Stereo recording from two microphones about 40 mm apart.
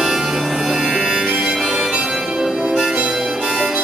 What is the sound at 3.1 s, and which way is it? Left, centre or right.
Harmonica, centre.